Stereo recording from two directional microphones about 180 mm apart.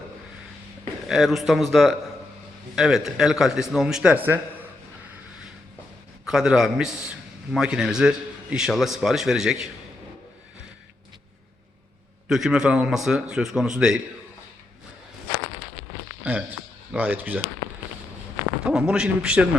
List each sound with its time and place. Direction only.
1.0 s a man's voice: centre (ahead or behind)
6.2 s a man's voice: 5° right (ahead or behind)
12.3 s a man's voice: 5° right (ahead or behind)
16.9 s speech: 10° right (ahead or behind)
18.6 s a man's voice: 5° right (ahead or behind)